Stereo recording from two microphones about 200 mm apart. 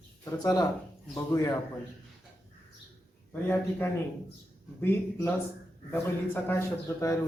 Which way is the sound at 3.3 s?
10° left (ahead or behind).